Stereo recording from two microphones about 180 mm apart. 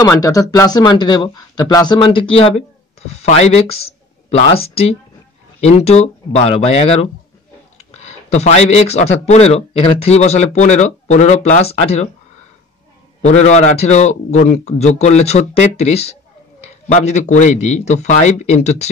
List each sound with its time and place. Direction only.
0.0 s a man's voice: 20° left (ahead or behind)
7.7 s a sound: 35° left (ahead or behind)
9.2 s a man's voice: 35° left (ahead or behind)
13.2 s a man's voice: 40° left (ahead or behind)